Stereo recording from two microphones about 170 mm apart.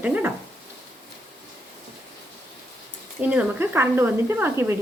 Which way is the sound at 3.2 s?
5° right (ahead or behind).